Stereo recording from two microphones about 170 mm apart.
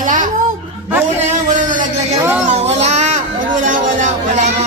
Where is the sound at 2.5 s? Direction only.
40° right (ahead or behind).